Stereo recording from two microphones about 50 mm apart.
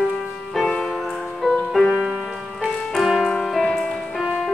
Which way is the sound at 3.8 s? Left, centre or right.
Centre.